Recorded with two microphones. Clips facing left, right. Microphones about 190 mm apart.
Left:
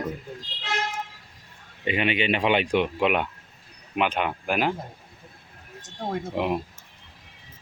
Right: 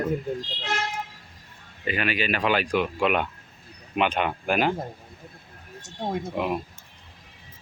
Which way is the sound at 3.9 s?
5° left (ahead or behind).